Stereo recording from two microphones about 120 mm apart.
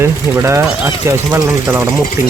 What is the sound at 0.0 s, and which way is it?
Speech, 20° right (ahead or behind).